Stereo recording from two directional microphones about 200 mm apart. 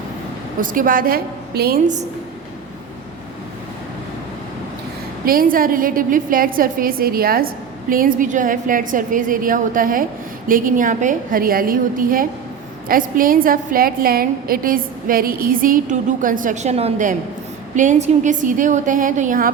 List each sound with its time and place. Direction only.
0.6 s a woman's voice: 45° right (ahead or behind)
5.2 s a woman's voice: 45° right (ahead or behind)